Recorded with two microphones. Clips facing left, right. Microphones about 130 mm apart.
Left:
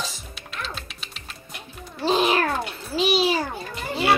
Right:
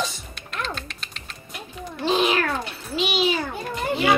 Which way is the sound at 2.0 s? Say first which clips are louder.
Left 1 dB; 35° left (ahead or behind).